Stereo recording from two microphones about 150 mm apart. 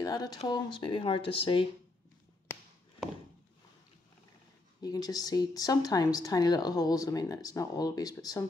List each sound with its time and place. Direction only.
0.0 s speech: 25° left (ahead or behind)
4.8 s speech: 25° left (ahead or behind)